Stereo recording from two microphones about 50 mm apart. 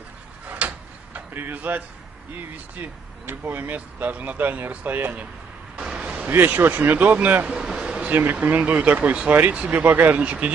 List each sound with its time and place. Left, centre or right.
0.5 s tick-tock: right
1.4 s speech: right
5.8 s a sound: centre
6.2 s speech: right
7.5 s a sound: centre
8.1 s speech: right
9.3 s speech: right